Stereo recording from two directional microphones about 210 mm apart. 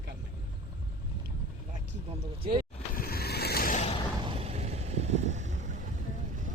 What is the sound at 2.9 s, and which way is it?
Vehicle, 45° left (ahead or behind).